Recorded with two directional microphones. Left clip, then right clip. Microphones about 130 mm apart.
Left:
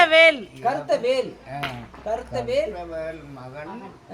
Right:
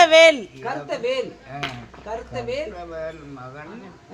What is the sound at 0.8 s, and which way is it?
Speech, centre (ahead or behind).